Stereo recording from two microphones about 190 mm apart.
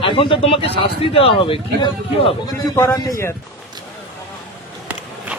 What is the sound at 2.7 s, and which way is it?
Speech, 15° left (ahead or behind).